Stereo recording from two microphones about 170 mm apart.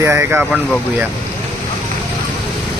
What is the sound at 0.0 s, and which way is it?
Speech, 15° right (ahead or behind).